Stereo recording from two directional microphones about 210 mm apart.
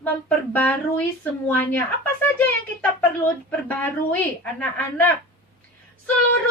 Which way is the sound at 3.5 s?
10° left (ahead or behind).